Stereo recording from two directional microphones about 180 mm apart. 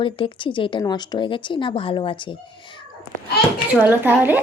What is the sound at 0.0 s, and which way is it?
Speech, 25° left (ahead or behind).